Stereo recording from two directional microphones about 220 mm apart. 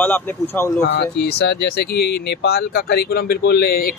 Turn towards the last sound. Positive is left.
turn(degrees=45)  # may be behind; listen again after turning